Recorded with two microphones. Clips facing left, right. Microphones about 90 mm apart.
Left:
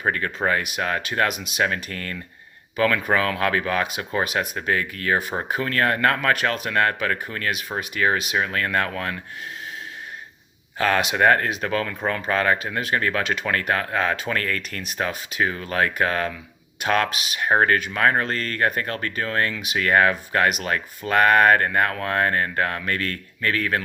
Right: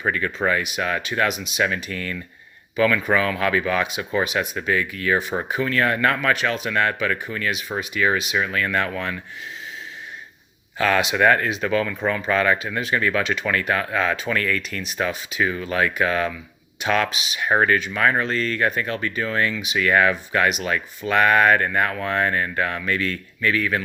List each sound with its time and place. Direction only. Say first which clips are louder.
0.0 s speech: right 1 dB; 45° left (ahead or behind)
10.8 s speech: right 1 dB; 40° left (ahead or behind)